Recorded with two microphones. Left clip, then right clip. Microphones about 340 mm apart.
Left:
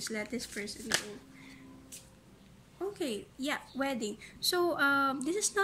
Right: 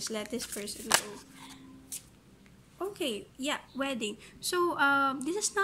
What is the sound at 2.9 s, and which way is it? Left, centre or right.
Speech, centre.